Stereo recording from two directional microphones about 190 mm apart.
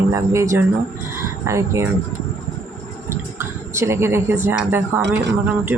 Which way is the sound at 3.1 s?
15° right (ahead or behind).